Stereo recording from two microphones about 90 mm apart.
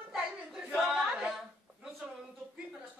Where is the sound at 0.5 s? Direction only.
5° right (ahead or behind).